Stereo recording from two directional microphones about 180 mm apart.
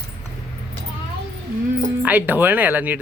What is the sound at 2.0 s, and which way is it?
Speech, 10° right (ahead or behind).